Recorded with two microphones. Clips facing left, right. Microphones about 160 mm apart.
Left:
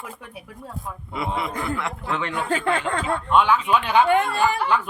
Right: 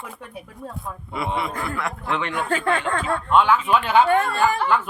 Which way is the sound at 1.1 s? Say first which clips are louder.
Right 1 dB; 20° left (ahead or behind).